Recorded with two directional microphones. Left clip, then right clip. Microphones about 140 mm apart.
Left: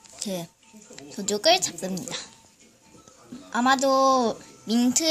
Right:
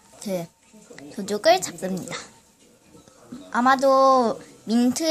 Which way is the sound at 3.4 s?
Centre (ahead or behind).